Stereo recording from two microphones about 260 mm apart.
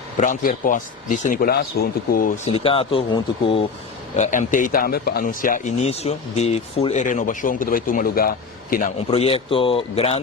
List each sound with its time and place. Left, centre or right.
0.2 s speech: left
2.5 s speech: left